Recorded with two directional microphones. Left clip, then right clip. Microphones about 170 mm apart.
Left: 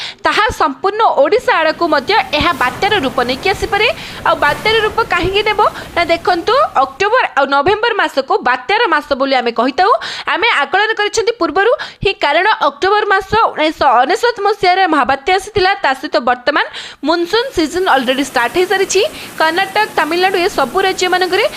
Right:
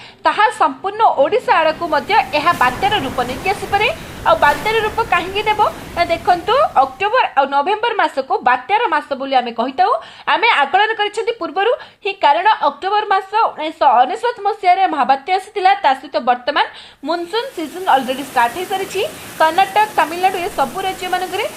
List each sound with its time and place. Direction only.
0.2 s a woman's voice: 25° left (ahead or behind)
10.2 s a woman's voice: 25° left (ahead or behind)
12.0 s a woman's voice: 25° left (ahead or behind)
12.4 s a woman's voice: 40° left (ahead or behind); by 20.5 s 20° left (ahead or behind)
20.6 s a woman's voice: 40° left (ahead or behind)